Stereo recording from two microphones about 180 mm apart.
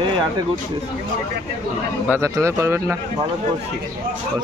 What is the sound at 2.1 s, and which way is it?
Speech, 15° right (ahead or behind).